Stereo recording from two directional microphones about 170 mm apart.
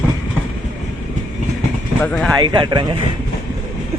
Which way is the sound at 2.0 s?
5° left (ahead or behind).